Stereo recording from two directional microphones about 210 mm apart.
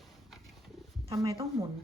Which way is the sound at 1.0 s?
25° right (ahead or behind).